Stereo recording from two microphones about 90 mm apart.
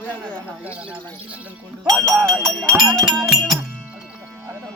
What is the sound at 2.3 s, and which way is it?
Music, 5° left (ahead or behind).